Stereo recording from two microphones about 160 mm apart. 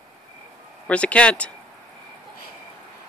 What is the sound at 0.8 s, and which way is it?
Speech, 10° left (ahead or behind).